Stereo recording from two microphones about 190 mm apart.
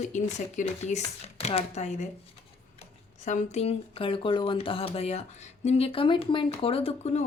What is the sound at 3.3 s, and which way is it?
Speech, 40° left (ahead or behind).